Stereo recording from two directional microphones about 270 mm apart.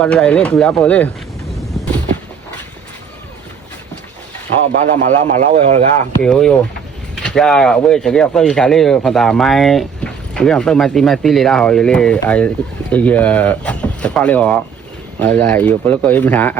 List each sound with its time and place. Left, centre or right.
0.0 s speech: centre
4.7 s speech: right
6.2 s speech: centre